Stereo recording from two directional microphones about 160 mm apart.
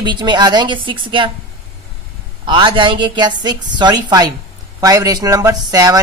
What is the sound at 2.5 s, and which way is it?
A woman's voice, 30° right (ahead or behind).